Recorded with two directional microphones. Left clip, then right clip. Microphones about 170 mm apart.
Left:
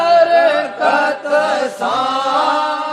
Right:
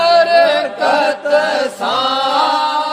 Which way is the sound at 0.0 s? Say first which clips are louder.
Right 1 dB; 40° right (ahead or behind).